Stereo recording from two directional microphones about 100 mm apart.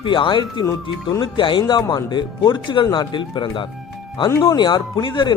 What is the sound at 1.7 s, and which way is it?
Speech, 45° left (ahead or behind).